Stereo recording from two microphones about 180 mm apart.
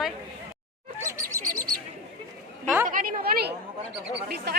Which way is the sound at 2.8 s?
50° right (ahead or behind).